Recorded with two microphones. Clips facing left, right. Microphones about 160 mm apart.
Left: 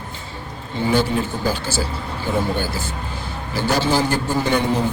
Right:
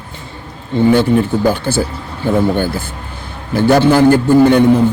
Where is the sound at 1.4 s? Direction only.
55° right (ahead or behind).